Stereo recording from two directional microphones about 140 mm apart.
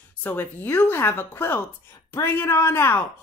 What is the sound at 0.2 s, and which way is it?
Speech, 15° left (ahead or behind).